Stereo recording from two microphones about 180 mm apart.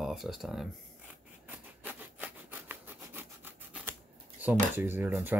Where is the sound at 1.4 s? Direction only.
10° right (ahead or behind).